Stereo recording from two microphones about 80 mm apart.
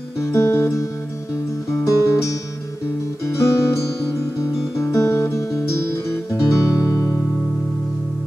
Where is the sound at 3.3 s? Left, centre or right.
Left.